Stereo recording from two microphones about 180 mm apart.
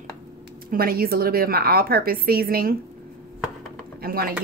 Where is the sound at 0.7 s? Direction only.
55° right (ahead or behind).